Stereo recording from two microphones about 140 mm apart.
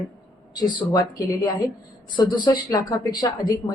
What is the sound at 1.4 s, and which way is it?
Speech, 30° left (ahead or behind).